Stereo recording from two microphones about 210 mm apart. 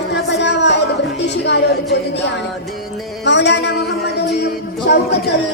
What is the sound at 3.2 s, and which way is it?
Music, 55° left (ahead or behind).